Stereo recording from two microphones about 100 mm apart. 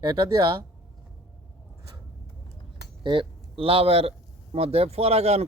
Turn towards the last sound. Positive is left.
turn(degrees=-90)